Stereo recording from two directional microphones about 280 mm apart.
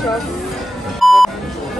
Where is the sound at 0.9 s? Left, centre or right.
Centre.